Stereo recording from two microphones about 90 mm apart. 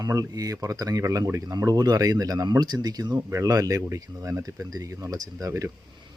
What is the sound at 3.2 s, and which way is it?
Speech, 35° right (ahead or behind).